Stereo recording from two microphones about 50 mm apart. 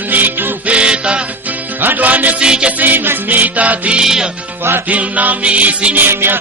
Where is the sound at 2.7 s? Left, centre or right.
Right.